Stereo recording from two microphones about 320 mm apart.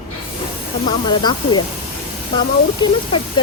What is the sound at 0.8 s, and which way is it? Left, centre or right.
Speech, centre.